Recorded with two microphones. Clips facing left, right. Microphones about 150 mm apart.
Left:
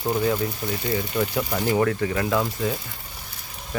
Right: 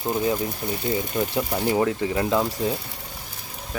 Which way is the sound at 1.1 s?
20° right (ahead or behind).